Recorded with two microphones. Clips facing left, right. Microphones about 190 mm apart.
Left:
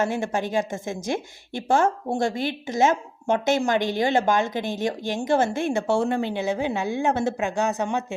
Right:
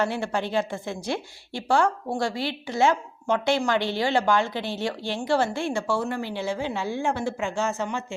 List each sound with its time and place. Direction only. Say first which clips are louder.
0.0 s a woman's voice: left 2 dB; 20° left (ahead or behind)